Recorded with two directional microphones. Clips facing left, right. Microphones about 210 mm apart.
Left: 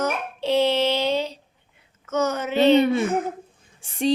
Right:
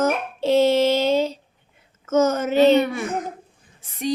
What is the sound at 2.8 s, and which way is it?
Speech, 25° left (ahead or behind).